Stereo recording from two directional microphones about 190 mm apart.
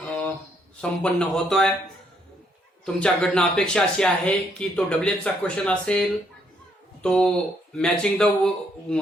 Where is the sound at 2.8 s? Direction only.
5° left (ahead or behind).